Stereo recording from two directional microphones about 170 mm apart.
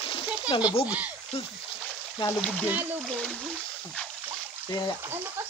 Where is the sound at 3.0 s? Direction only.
5° left (ahead or behind).